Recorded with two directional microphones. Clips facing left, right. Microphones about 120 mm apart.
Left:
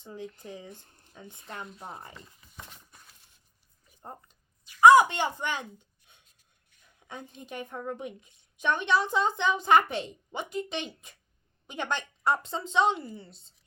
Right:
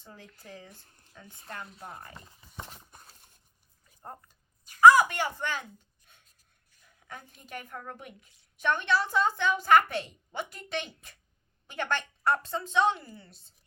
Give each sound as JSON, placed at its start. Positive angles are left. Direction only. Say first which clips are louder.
{"t": 0.0, "sound": "a woman's voice", "louder": "left 9 dB", "side_deg": 20}
{"t": 2.3, "sound": "a sound", "louder": "right 4 dB", "side_deg": -30}
{"t": 4.8, "sound": "speech", "louder": "left 1 dB", "side_deg": 20}
{"t": 7.1, "sound": "a woman's voice", "louder": "left 2 dB", "side_deg": 20}